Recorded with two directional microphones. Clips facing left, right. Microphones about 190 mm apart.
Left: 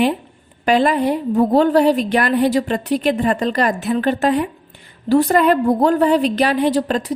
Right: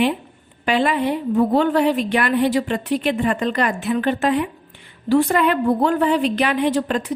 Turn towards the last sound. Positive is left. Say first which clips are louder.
# left 2 dB
turn(degrees=35)  # may be behind; listen again after turning